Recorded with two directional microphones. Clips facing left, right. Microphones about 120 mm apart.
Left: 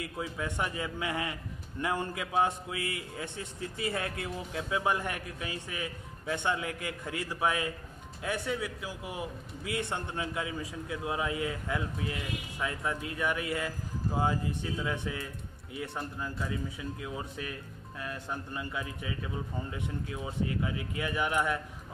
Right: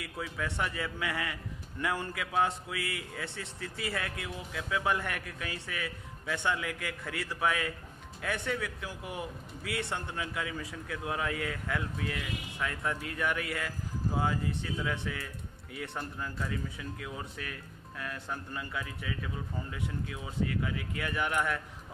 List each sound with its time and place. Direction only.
0.0 s a man's voice: 25° left (ahead or behind)